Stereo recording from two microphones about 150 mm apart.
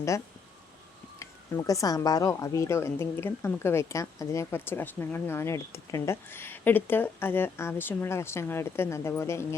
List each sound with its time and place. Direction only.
1.2 s speech: 20° left (ahead or behind)